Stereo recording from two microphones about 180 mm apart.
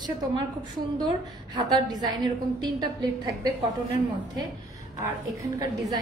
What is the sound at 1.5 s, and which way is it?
A woman's voice, 25° right (ahead or behind).